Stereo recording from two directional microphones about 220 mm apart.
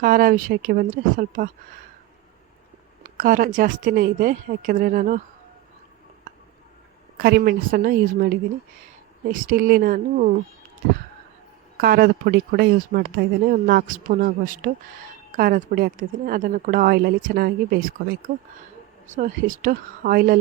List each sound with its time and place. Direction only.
0.0 s speech: 40° right (ahead or behind)
3.0 s speech: 35° right (ahead or behind)
7.2 s a woman's voice: 45° right (ahead or behind)
11.8 s speech: 45° right (ahead or behind)